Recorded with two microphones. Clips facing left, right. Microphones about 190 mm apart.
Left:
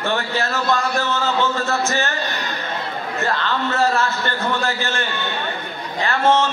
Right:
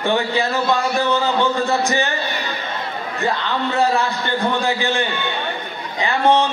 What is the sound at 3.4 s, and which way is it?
A man's voice, 15° right (ahead or behind).